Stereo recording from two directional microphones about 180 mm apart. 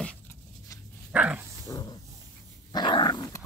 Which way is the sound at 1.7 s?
20° left (ahead or behind).